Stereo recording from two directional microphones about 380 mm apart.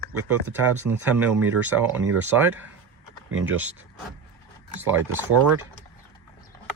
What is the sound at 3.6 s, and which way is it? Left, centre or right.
Speech, centre.